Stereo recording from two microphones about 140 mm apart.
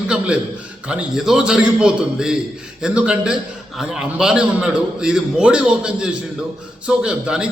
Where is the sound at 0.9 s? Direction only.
5° right (ahead or behind).